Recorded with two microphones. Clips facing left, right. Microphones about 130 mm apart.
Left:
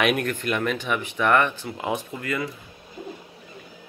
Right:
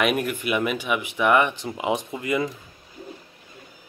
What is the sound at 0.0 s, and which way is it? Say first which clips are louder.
Speech: even; 5° right (ahead or behind).